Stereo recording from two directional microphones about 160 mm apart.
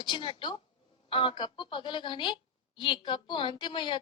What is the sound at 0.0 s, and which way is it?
A woman's voice, 30° left (ahead or behind).